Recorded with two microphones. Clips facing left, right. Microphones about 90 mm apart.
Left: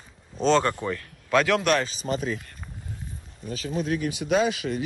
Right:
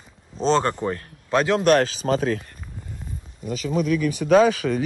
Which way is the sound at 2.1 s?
90° right.